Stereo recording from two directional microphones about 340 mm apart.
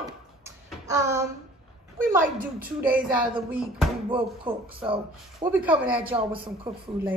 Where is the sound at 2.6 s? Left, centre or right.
Centre.